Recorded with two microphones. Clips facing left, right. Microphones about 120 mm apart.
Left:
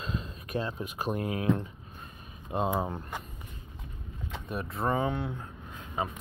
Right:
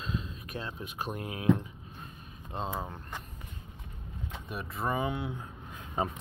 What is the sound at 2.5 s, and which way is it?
Speech, 15° left (ahead or behind).